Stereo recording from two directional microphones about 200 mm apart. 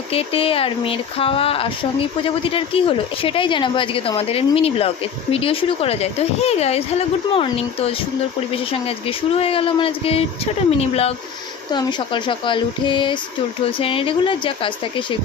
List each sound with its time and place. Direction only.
0.1 s speech: 30° left (ahead or behind)